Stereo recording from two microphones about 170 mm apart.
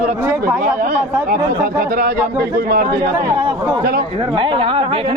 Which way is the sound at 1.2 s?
60° right (ahead or behind).